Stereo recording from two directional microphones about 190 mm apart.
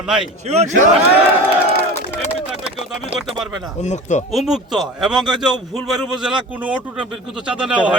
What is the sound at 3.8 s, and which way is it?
Speech, 40° left (ahead or behind).